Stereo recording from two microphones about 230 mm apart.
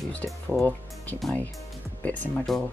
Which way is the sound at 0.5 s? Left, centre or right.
Centre.